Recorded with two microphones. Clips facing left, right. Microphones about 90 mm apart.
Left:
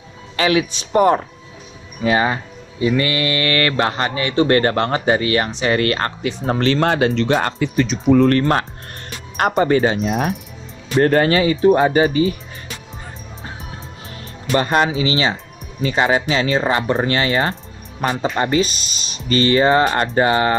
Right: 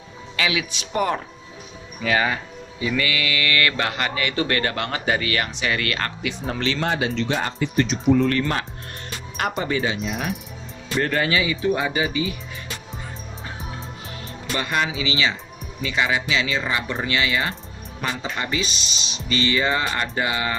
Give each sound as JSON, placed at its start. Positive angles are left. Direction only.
{"t": 0.4, "sound": "speech", "side_deg": 35}
{"t": 8.2, "sound": "speech", "side_deg": 45}
{"t": 14.5, "sound": "speech", "side_deg": 45}